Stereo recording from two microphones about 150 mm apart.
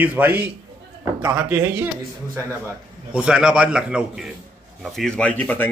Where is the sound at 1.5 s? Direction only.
15° right (ahead or behind).